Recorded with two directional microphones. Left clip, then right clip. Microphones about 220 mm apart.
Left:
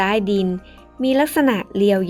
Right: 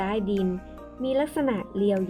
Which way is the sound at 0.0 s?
20° left (ahead or behind).